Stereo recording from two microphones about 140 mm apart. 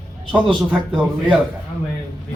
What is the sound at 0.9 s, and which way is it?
Speech, 10° right (ahead or behind).